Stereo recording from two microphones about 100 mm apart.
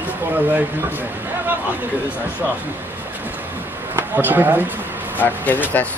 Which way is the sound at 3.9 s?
20° right (ahead or behind).